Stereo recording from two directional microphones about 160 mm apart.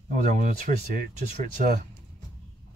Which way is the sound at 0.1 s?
50° right (ahead or behind).